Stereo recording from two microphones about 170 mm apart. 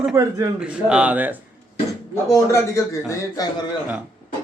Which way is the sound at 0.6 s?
5° right (ahead or behind).